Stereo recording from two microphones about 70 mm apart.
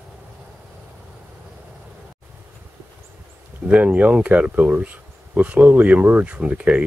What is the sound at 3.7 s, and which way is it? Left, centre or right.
Speech, centre.